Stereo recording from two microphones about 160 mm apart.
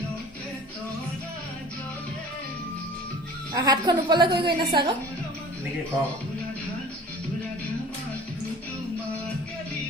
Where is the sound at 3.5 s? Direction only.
25° right (ahead or behind).